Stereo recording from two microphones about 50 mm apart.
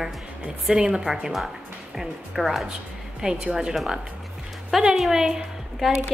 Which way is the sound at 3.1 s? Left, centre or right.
Centre.